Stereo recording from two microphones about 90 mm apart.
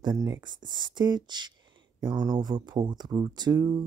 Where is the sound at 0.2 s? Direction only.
50° right (ahead or behind).